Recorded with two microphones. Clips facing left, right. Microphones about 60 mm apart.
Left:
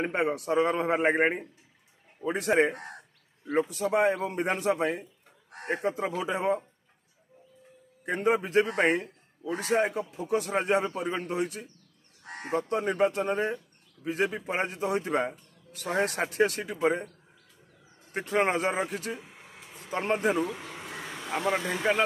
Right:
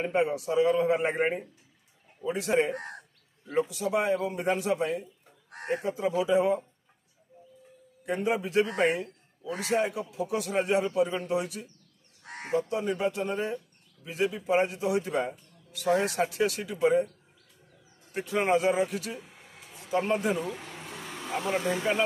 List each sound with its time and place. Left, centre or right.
0.0 s speech: left
8.0 s a man's voice: left
12.4 s speech: left
18.1 s a man's voice: left
21.0 s vehicle: centre
21.5 s speech: left